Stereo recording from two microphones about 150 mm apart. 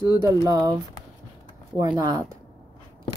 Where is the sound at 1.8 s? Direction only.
25° right (ahead or behind).